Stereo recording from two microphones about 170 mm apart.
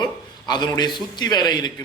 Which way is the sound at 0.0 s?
25° left (ahead or behind).